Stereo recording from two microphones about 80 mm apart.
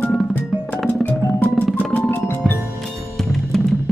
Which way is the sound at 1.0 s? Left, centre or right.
Left.